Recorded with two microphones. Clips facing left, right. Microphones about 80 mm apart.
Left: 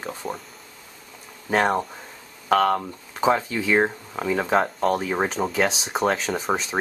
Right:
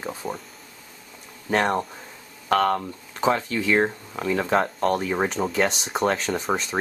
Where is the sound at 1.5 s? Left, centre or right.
Centre.